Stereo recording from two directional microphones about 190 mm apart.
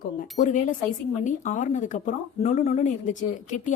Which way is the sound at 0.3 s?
40° left (ahead or behind).